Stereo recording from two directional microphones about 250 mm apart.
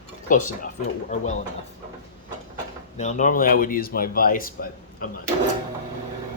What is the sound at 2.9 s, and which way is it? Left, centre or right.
Speech, left.